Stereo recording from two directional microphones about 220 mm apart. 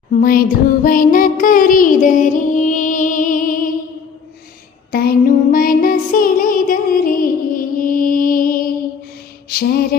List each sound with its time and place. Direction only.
0.1 s music: 40° left (ahead or behind)
4.9 s music: 45° left (ahead or behind)